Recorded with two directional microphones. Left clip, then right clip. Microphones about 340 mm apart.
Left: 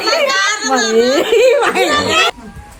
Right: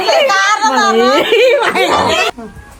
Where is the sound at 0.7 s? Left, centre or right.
Centre.